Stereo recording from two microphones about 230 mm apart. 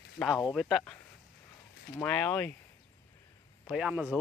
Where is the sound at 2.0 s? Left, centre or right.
Centre.